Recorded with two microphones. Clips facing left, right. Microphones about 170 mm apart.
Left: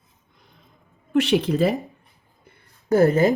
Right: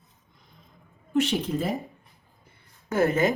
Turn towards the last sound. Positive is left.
turn(degrees=35)  # may be behind; listen again after turning